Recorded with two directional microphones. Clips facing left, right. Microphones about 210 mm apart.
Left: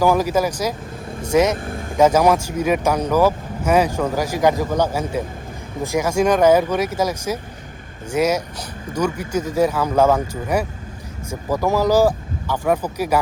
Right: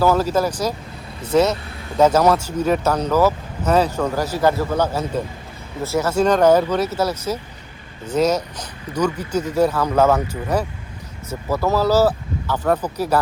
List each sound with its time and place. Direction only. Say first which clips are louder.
0.0 s speech: even; 15° left (ahead or behind)
1.5 s vehicle: left 6 dB; 50° left (ahead or behind)
2.0 s speech: even; 10° left (ahead or behind)